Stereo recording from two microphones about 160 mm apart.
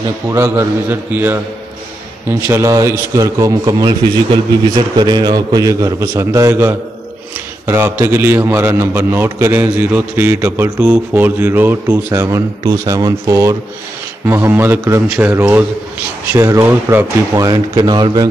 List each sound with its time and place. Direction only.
0.3 s a man's voice: 15° right (ahead or behind)